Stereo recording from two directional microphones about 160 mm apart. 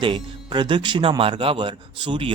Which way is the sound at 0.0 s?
30° right (ahead or behind).